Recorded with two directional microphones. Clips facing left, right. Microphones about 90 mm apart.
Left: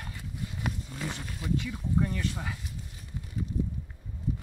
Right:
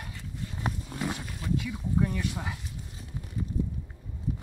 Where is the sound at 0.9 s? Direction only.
10° right (ahead or behind).